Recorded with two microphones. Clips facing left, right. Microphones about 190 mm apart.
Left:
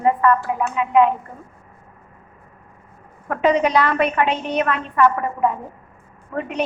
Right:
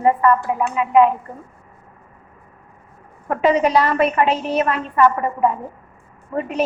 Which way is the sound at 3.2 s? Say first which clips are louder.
Right 1 dB; 5° right (ahead or behind).